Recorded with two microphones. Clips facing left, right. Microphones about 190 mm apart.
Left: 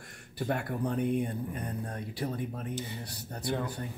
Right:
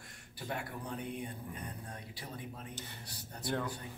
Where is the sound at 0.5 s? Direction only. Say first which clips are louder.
Left 9 dB; 55° left (ahead or behind).